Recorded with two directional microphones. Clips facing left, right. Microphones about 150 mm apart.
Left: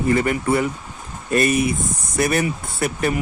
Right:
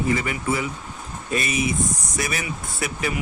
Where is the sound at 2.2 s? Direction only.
50° left (ahead or behind).